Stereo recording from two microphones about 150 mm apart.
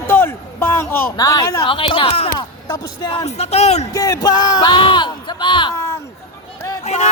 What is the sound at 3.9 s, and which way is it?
Speech, 25° left (ahead or behind).